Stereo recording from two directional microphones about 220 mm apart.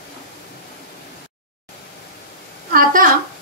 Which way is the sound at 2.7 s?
40° right (ahead or behind).